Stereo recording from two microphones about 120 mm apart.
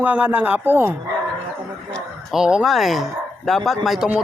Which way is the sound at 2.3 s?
5° right (ahead or behind).